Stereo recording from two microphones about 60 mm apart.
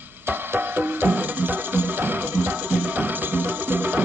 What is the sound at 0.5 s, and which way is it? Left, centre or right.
Music, right.